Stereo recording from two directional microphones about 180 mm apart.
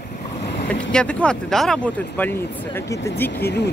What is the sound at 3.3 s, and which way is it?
Speech, 70° left (ahead or behind).